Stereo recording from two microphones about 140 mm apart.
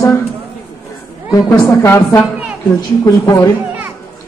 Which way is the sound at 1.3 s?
25° left (ahead or behind).